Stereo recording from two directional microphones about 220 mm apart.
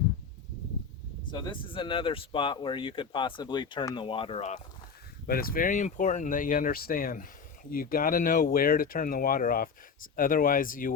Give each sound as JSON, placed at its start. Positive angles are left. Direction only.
{"t": 1.3, "sound": "speech", "side_deg": 20}
{"t": 5.2, "sound": "speech", "side_deg": 40}